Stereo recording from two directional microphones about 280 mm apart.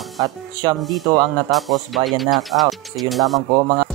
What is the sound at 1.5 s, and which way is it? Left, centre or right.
Speech, centre.